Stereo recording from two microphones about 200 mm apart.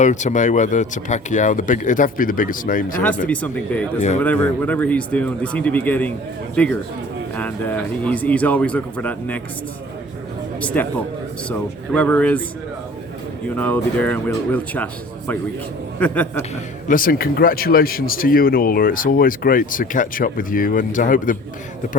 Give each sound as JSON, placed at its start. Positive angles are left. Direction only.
{"t": 0.0, "sound": "speech", "side_deg": 35}
{"t": 3.0, "sound": "a man's voice", "side_deg": 5}
{"t": 10.6, "sound": "a man's voice", "side_deg": 5}
{"t": 13.6, "sound": "a man's voice", "side_deg": 10}
{"t": 16.0, "sound": "a man's voice", "side_deg": 5}
{"t": 16.9, "sound": "speech", "side_deg": 45}